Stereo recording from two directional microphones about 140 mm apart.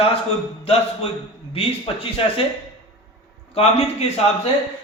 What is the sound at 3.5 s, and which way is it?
Speech, 45° left (ahead or behind).